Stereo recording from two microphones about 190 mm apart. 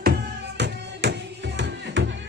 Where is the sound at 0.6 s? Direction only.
65° right (ahead or behind).